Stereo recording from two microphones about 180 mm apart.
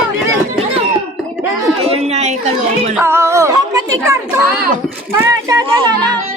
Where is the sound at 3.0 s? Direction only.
15° right (ahead or behind).